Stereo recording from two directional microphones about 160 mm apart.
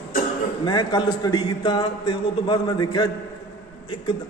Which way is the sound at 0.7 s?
25° left (ahead or behind).